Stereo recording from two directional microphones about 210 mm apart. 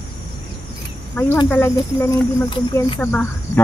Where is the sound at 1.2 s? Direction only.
10° left (ahead or behind).